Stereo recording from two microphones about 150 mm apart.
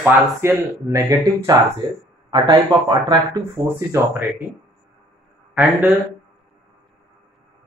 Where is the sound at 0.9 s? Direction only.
25° right (ahead or behind).